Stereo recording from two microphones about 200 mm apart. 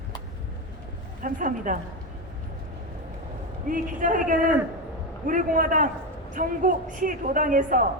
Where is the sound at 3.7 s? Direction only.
40° right (ahead or behind).